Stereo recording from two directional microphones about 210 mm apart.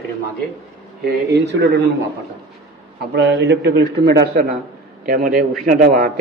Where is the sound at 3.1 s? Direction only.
55° right (ahead or behind).